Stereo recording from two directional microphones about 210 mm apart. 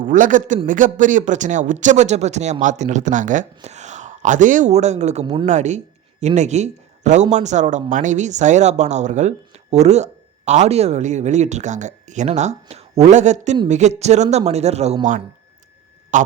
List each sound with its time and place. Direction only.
0.0 s speech: 40° right (ahead or behind); by 5.5 s 25° right (ahead or behind)
5.5 s speech: 35° right (ahead or behind)
16.1 s speech: 35° right (ahead or behind)